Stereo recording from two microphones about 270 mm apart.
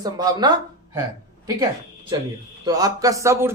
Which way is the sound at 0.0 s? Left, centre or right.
Centre.